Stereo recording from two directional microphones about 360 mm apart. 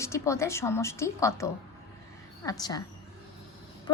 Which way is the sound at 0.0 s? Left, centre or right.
Centre.